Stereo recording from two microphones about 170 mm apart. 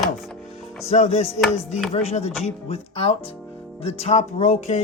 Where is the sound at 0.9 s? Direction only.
40° left (ahead or behind).